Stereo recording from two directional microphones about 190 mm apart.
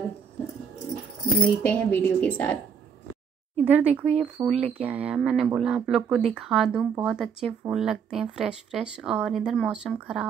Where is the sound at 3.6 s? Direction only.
10° right (ahead or behind).